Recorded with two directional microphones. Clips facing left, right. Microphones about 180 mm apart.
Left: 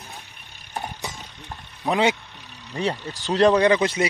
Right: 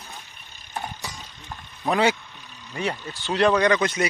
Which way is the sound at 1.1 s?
20° left (ahead or behind).